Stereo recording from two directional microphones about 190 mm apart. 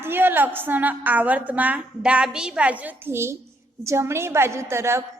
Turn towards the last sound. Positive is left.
turn(degrees=-15)  # may be behind; listen again after turning